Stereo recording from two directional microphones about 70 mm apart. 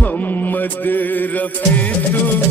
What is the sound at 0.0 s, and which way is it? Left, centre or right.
Music, left.